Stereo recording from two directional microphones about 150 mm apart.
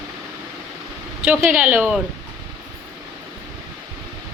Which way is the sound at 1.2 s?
10° right (ahead or behind).